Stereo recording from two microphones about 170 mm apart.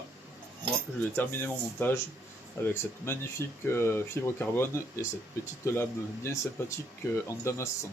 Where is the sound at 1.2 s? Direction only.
10° left (ahead or behind).